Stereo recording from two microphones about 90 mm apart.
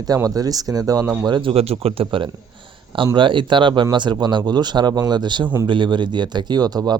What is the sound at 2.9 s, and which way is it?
A man's voice, 65° right (ahead or behind).